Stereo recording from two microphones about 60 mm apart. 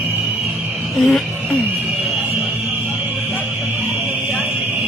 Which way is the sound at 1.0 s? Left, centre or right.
Centre.